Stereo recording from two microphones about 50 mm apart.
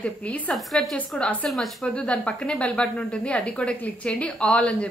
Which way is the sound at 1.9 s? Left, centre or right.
Left.